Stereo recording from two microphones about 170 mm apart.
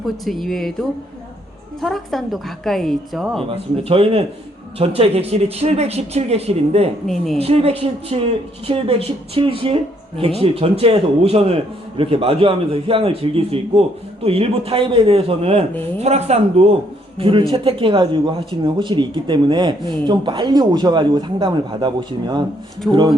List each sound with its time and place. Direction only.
0.0 s a woman's voice: centre (ahead or behind)
3.8 s a man's voice: 35° right (ahead or behind)